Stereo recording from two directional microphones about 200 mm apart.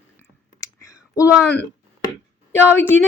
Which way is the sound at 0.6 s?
15° left (ahead or behind).